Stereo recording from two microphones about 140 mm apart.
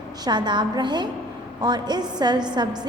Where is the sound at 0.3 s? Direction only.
30° right (ahead or behind).